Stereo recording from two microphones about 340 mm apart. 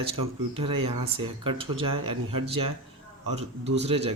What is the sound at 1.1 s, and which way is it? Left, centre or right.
Speech, centre.